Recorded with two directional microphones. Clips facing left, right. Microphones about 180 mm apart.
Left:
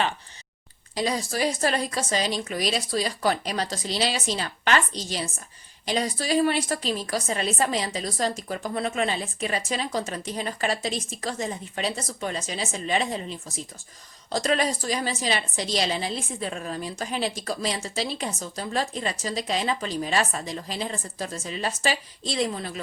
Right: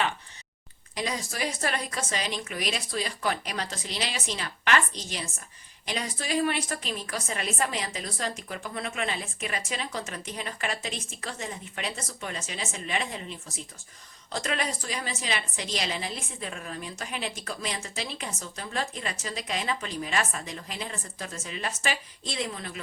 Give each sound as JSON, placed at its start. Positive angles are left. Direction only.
{"t": 0.9, "sound": "a woman's voice", "side_deg": 35}